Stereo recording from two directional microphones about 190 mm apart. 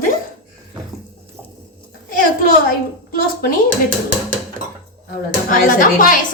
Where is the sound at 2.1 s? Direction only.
45° left (ahead or behind).